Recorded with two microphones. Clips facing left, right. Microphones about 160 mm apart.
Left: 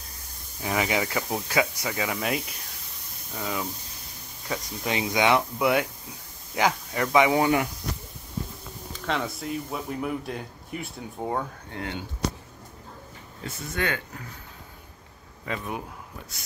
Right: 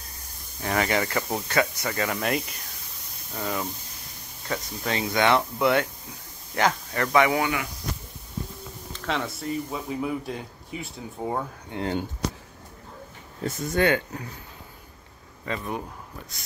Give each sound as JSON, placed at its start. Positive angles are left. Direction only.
{"t": 0.6, "sound": "speech", "side_deg": 5}
{"t": 4.5, "sound": "speech", "side_deg": 10}
{"t": 7.3, "sound": "speech", "side_deg": 35}
{"t": 8.9, "sound": "speech", "side_deg": 0}
{"t": 11.7, "sound": "speech", "side_deg": -20}
{"t": 13.4, "sound": "speech", "side_deg": -35}
{"t": 15.4, "sound": "speech", "side_deg": 5}